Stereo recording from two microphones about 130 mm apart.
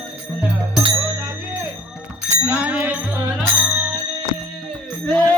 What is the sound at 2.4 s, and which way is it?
Music, 10° right (ahead or behind).